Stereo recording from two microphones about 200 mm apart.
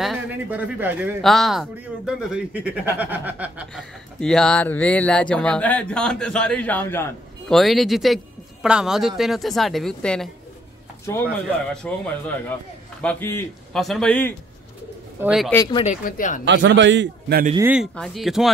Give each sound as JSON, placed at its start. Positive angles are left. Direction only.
{"t": 0.0, "sound": "speech", "side_deg": -5}
{"t": 3.0, "sound": "chuckle", "side_deg": -10}
{"t": 4.2, "sound": "speech", "side_deg": 5}
{"t": 11.7, "sound": "a man's voice", "side_deg": 5}
{"t": 15.5, "sound": "speech", "side_deg": 20}
{"t": 15.8, "sound": "speech", "side_deg": 40}
{"t": 16.4, "sound": "a man's voice", "side_deg": -65}
{"t": 17.6, "sound": "chuckle", "side_deg": -10}
{"t": 17.9, "sound": "speech", "side_deg": 0}